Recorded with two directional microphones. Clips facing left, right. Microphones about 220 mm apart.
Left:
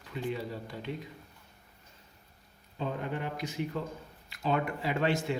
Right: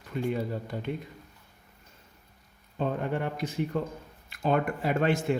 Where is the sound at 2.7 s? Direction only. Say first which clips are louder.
Right 5 dB; 55° right (ahead or behind).